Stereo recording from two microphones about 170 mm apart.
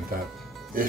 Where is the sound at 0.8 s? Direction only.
55° right (ahead or behind).